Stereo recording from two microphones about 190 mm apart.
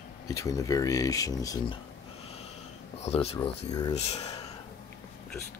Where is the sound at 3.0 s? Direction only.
35° left (ahead or behind).